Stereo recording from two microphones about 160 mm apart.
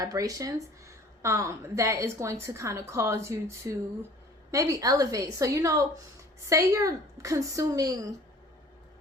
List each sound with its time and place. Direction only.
0.0 s a woman's voice: 20° right (ahead or behind)